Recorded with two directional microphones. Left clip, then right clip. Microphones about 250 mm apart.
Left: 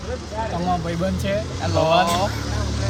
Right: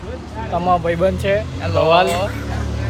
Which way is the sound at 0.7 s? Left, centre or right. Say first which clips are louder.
Right 12 dB; centre.